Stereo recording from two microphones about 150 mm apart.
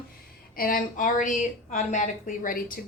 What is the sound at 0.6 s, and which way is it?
A woman's voice, 70° left (ahead or behind).